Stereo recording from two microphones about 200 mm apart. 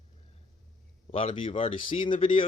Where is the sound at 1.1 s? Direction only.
25° left (ahead or behind).